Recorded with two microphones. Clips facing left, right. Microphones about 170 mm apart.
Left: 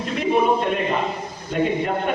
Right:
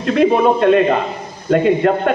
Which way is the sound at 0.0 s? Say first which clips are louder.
Right 7 dB; 80° right.